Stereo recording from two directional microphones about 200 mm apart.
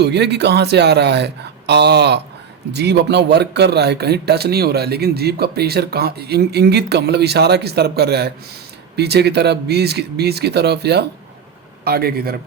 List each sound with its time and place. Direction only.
0.0 s a man's voice: 55° right (ahead or behind)